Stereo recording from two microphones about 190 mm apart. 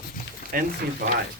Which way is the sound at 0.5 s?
45° right (ahead or behind).